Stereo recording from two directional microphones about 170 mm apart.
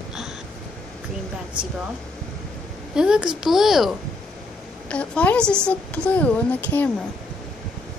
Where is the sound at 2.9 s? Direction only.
5° right (ahead or behind).